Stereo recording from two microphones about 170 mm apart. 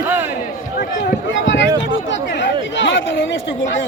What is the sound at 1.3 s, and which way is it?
Speech, 90° left.